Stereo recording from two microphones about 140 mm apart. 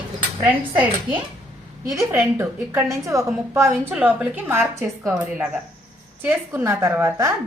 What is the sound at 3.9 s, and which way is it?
Speech, 10° right (ahead or behind).